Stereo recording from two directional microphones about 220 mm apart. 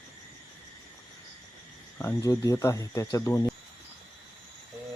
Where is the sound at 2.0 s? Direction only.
15° left (ahead or behind).